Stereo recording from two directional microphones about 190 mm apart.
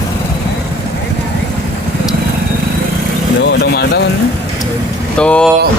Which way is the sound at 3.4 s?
60° left (ahead or behind).